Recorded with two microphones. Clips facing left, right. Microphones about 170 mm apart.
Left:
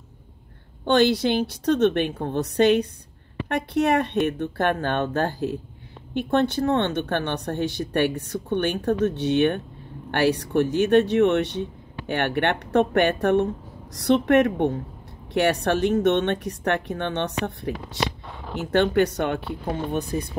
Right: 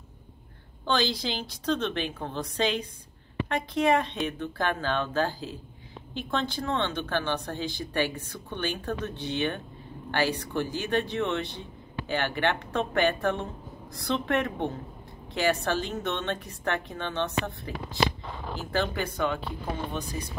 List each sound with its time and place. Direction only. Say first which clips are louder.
0.8 s speech: left 9 dB; 65° left (ahead or behind)
12.1 s speech: left 4 dB; 65° left (ahead or behind)